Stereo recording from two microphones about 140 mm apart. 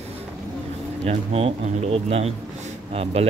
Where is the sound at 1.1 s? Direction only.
50° right (ahead or behind).